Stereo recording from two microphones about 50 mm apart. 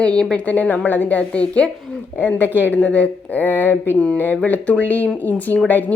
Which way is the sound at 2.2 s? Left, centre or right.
Left.